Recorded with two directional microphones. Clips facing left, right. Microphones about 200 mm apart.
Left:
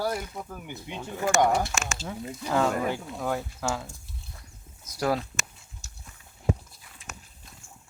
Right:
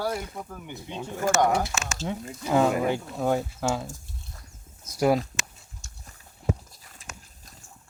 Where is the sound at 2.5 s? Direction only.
10° right (ahead or behind).